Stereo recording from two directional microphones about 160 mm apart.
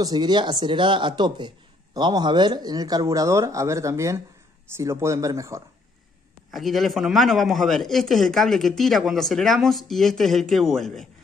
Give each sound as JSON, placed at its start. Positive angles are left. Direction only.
{"t": 0.0, "sound": "speech", "side_deg": -25}
{"t": 6.5, "sound": "speech", "side_deg": 0}